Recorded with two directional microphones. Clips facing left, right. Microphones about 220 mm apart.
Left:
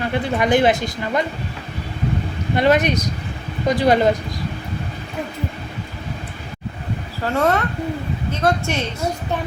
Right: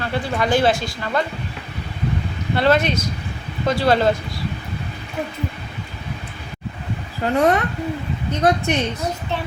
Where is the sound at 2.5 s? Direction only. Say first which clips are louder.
Left 1 dB; 15° left (ahead or behind).